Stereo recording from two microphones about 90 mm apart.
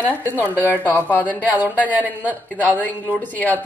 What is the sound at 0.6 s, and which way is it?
A woman's voice, 20° left (ahead or behind).